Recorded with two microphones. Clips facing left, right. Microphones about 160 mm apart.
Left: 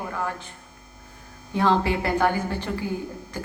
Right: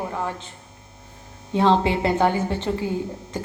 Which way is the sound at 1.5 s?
20° right (ahead or behind).